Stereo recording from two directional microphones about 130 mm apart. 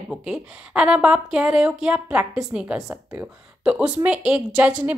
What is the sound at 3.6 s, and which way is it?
Speech, 5° right (ahead or behind).